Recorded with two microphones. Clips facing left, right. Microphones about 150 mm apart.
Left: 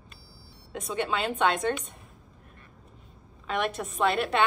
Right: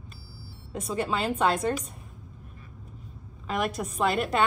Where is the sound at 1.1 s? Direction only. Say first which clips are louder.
Even; 35° right (ahead or behind).